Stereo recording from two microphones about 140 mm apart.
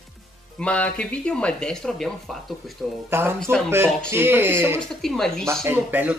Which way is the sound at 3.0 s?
15° right (ahead or behind).